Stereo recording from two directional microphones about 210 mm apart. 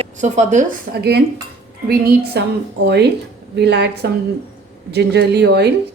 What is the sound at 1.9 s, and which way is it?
A woman's voice, 50° right (ahead or behind).